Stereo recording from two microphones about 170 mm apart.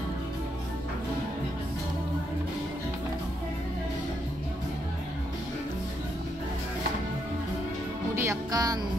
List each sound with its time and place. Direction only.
8.2 s music: 20° right (ahead or behind)